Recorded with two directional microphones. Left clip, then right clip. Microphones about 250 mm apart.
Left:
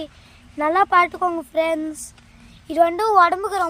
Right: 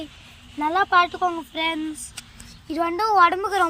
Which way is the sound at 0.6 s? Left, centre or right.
Centre.